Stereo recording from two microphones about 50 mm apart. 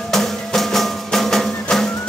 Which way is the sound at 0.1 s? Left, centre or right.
Centre.